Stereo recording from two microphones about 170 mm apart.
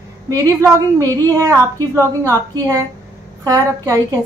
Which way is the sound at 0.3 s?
20° right (ahead or behind).